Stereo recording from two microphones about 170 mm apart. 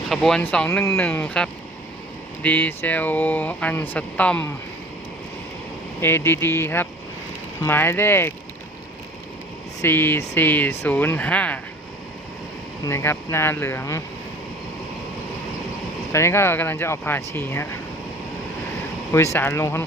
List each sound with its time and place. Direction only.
0.1 s speech: 5° left (ahead or behind)
6.0 s speech: 15° left (ahead or behind)
9.8 s speech: 10° left (ahead or behind)
12.8 s speech: 15° left (ahead or behind)
16.1 s speech: 15° left (ahead or behind)
19.1 s speech: 15° left (ahead or behind)